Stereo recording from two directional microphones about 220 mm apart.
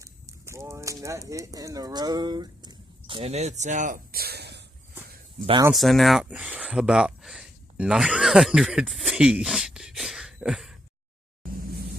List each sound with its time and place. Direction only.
0.0 s clip-clop: 15° right (ahead or behind)
1.0 s speech: 15° right (ahead or behind); by 4.6 s 50° right (ahead or behind)
5.4 s speech: 25° right (ahead or behind)
5.7 s speech: centre (ahead or behind)
11.6 s vehicle: 45° right (ahead or behind)